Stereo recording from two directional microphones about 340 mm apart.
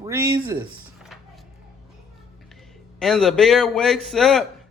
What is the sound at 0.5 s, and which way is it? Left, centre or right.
Speech, centre.